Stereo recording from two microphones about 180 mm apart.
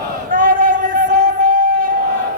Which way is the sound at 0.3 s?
50° right (ahead or behind).